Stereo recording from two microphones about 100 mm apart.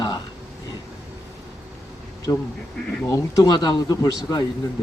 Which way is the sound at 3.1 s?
35° left (ahead or behind).